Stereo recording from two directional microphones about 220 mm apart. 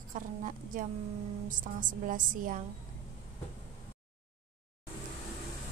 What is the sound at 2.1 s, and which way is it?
Speech, 40° right (ahead or behind).